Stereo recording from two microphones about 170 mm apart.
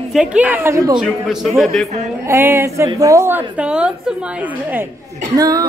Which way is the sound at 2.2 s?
15° right (ahead or behind).